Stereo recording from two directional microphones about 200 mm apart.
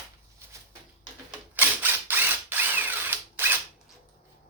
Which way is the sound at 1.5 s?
10° right (ahead or behind).